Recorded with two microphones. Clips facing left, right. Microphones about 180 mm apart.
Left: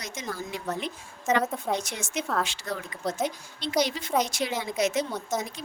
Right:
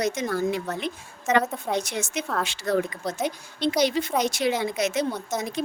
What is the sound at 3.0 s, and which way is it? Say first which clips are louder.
Speech: even; 10° right (ahead or behind).